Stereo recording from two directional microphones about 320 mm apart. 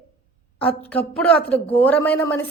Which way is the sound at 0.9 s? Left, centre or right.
Centre.